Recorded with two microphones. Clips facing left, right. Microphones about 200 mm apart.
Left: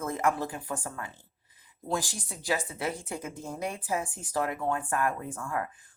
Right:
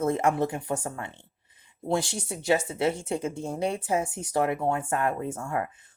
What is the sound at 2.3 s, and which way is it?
Speech, 25° right (ahead or behind).